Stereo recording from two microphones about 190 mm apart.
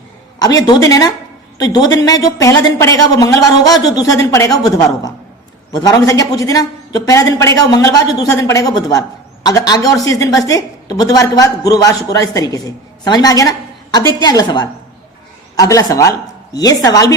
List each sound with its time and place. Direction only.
0.3 s a man's voice: 20° left (ahead or behind)